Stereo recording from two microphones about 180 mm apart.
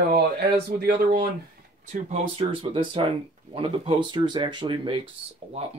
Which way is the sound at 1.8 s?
35° right (ahead or behind).